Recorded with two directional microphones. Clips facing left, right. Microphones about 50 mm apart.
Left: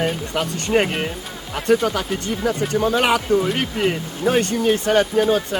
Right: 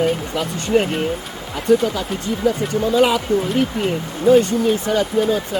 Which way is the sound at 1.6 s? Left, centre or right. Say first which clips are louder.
Right 2 dB; left.